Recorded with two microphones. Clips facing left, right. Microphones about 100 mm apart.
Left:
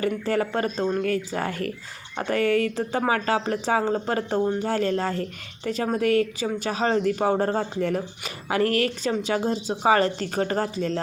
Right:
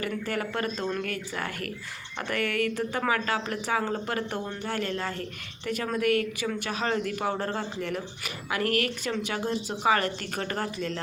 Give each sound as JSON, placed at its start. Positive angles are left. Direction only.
{"t": 0.0, "sound": "speech", "side_deg": 30}